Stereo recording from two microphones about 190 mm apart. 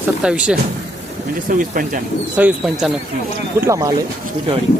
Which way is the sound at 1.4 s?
45° right (ahead or behind).